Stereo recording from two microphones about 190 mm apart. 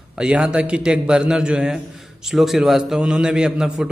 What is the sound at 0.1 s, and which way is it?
A man's voice, 5° right (ahead or behind).